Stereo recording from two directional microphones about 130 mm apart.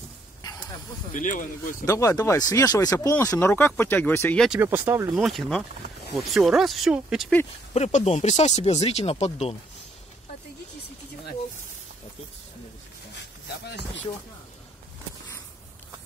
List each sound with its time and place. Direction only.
1.1 s speech: 90° left
1.9 s speech: 25° left (ahead or behind)
4.5 s speech: 15° right (ahead or behind)
5.1 s speech: centre (ahead or behind)
7.7 s speech: 60° left (ahead or behind)